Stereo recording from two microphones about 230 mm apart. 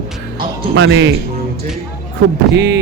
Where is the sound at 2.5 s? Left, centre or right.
Right.